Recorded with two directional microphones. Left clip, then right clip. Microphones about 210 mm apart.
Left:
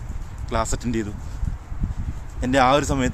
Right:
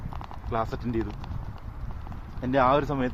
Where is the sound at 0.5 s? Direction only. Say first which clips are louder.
Left 4 dB; 15° left (ahead or behind).